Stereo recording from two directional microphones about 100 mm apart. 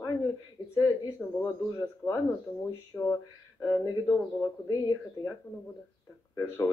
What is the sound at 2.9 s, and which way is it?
Speech, 15° left (ahead or behind).